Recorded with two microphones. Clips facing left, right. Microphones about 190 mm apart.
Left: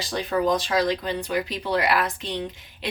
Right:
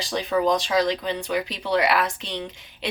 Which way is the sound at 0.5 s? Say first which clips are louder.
Right 1 dB; centre (ahead or behind).